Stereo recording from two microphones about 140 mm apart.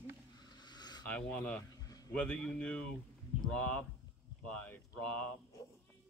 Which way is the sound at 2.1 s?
10° left (ahead or behind).